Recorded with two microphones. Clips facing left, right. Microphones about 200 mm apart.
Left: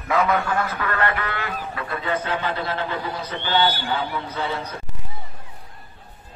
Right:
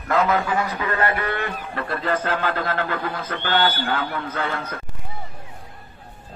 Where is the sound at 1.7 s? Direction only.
45° right (ahead or behind).